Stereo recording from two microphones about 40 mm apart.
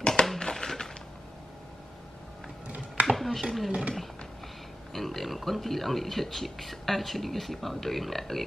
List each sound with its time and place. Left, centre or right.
0.0 s a sound: centre
3.2 s speech: centre
4.9 s speech: centre